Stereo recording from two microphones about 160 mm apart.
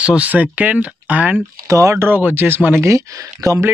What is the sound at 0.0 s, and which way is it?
Speech, 10° right (ahead or behind).